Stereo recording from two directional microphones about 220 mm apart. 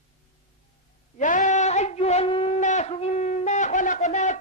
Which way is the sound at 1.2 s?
35° left (ahead or behind).